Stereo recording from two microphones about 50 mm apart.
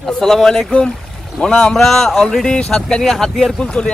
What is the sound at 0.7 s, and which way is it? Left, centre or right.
Speech, left.